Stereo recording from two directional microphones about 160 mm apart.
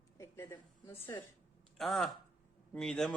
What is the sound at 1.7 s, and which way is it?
Speech, centre (ahead or behind).